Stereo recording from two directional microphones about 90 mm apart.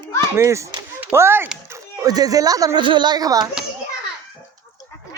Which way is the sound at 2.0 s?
45° right (ahead or behind).